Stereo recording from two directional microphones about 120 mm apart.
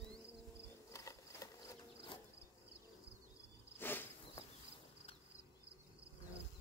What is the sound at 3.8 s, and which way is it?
Insect, 15° left (ahead or behind).